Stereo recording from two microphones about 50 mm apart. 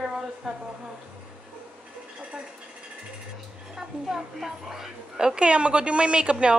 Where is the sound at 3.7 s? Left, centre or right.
Centre.